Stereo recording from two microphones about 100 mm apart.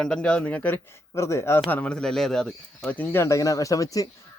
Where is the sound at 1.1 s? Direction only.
30° left (ahead or behind).